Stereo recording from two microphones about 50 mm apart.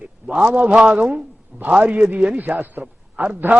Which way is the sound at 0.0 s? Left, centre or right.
Right.